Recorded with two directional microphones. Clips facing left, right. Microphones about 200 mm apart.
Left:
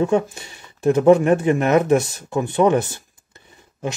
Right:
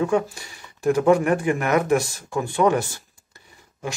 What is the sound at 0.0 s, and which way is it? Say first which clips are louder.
Speech: left 3 dB; 25° left (ahead or behind).